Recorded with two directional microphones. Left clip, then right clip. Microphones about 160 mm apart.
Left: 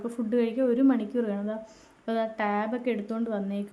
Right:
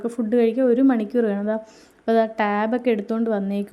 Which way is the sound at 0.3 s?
35° right (ahead or behind).